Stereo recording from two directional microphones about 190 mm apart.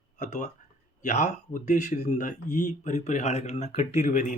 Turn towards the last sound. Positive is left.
turn(degrees=40)  # may be behind; listen again after turning